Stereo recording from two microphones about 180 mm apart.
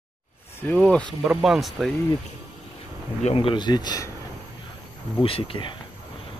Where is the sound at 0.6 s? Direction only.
10° left (ahead or behind).